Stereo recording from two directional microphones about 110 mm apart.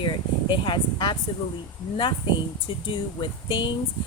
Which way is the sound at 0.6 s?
45° left (ahead or behind).